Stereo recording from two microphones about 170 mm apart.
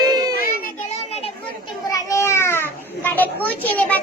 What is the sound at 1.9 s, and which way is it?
Children playing, 15° left (ahead or behind).